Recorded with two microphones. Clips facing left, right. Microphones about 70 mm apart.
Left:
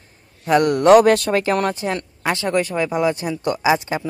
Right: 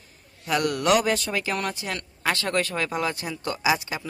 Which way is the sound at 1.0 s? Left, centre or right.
Left.